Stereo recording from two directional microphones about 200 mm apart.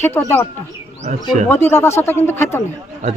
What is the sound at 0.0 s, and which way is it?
Speech, 10° left (ahead or behind).